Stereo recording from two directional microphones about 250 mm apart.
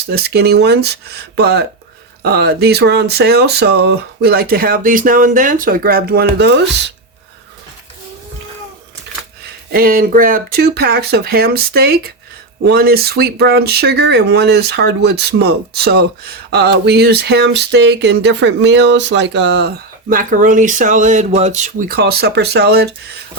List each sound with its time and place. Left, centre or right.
0.0 s speech: right
9.7 s speech: right